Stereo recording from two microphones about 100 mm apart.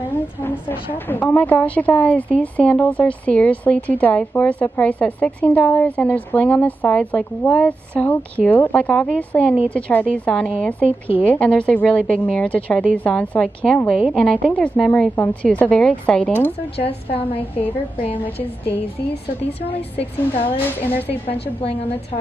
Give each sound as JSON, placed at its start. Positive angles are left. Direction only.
{"t": 0.9, "sound": "a woman's voice", "side_deg": 20}
{"t": 16.7, "sound": "a woman's voice", "side_deg": 70}
{"t": 17.4, "sound": "a woman's voice", "side_deg": 15}
{"t": 19.6, "sound": "a woman's voice", "side_deg": 70}